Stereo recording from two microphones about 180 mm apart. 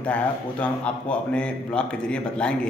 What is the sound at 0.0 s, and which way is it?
A man's voice, 5° left (ahead or behind).